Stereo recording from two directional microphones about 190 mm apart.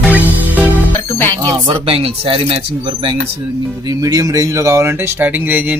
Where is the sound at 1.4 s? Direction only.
25° right (ahead or behind).